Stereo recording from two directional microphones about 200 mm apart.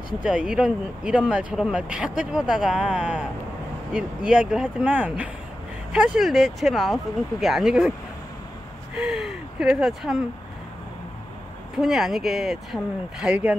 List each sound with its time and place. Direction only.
0.2 s speech: 5° right (ahead or behind)
8.9 s a sound: 5° right (ahead or behind)
11.8 s speech: centre (ahead or behind)